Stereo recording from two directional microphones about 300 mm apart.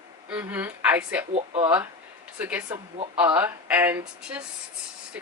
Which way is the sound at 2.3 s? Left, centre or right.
Centre.